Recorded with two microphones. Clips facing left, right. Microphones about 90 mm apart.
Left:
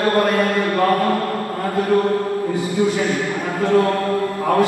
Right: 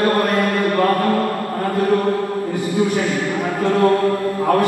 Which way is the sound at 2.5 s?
20° left (ahead or behind).